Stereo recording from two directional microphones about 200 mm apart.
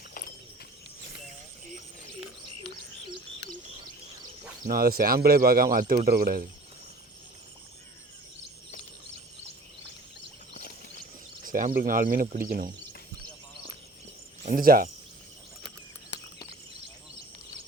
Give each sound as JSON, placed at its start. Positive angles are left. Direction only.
{"t": 4.6, "sound": "speech", "side_deg": -45}
{"t": 11.4, "sound": "speech", "side_deg": -45}
{"t": 14.4, "sound": "speech", "side_deg": -45}